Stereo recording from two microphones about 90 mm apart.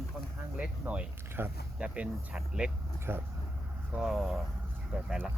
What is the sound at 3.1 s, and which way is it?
Speech, 25° right (ahead or behind).